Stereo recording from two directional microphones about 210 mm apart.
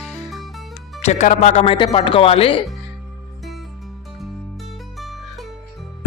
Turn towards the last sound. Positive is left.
turn(degrees=0)  # may be behind; listen again after turning